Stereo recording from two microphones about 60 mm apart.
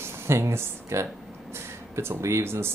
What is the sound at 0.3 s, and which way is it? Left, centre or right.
Speech, right.